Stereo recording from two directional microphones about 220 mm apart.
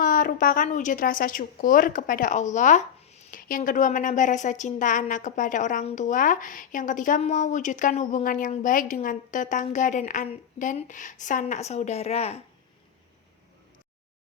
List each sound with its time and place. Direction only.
0.0 s a woman's voice: 35° left (ahead or behind)